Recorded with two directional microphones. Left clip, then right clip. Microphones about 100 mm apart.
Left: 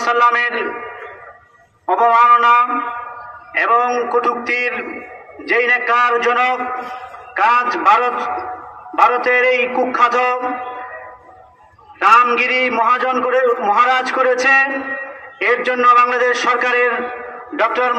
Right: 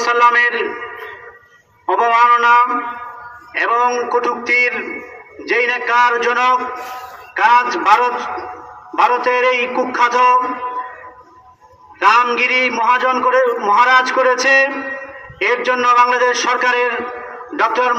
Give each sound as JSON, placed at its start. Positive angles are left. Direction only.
{"t": 0.0, "sound": "a man's voice", "side_deg": 35}
{"t": 1.9, "sound": "a man's voice", "side_deg": 30}
{"t": 12.0, "sound": "a man's voice", "side_deg": 45}
{"t": 17.6, "sound": "a man's voice", "side_deg": 25}